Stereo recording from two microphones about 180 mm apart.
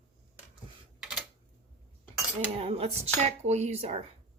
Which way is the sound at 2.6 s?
35° right (ahead or behind).